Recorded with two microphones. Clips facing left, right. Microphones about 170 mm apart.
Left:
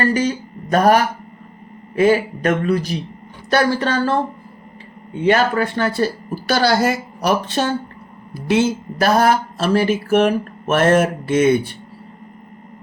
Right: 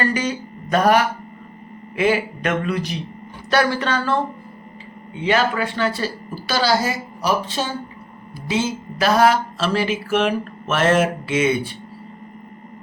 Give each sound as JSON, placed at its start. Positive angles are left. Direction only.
{"t": 0.0, "sound": "speech", "side_deg": 40}
{"t": 5.1, "sound": "speech", "side_deg": 50}